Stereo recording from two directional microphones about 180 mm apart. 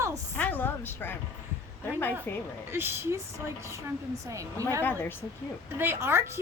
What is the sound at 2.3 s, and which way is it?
Speech, 15° left (ahead or behind).